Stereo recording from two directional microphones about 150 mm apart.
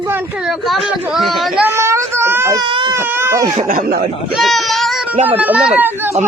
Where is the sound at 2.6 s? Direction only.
35° right (ahead or behind).